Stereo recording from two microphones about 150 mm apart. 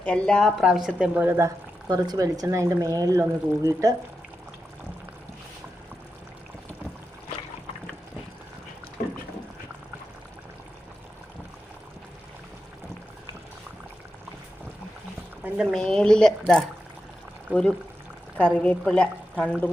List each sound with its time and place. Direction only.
0.0 s speech: 5° left (ahead or behind); by 3.9 s 20° right (ahead or behind)
15.4 s a woman's voice: 5° right (ahead or behind)